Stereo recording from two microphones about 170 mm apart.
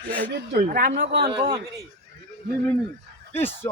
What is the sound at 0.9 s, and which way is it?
Speech, 85° right.